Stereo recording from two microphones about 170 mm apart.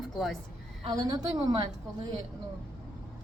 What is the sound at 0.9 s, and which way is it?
A woman's voice, 25° right (ahead or behind).